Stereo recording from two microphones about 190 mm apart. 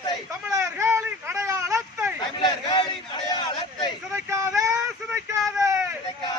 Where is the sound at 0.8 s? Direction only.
10° right (ahead or behind).